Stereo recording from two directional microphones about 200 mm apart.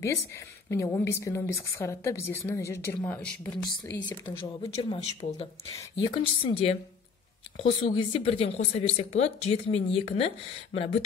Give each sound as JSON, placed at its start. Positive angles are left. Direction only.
{"t": 0.0, "sound": "speech", "side_deg": 15}
{"t": 4.4, "sound": "speech", "side_deg": 30}
{"t": 5.8, "sound": "speech", "side_deg": 15}